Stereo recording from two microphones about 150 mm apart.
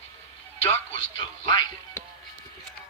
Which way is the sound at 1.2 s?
25° left (ahead or behind).